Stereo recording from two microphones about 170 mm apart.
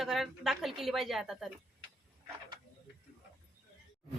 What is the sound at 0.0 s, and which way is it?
Speech, centre (ahead or behind).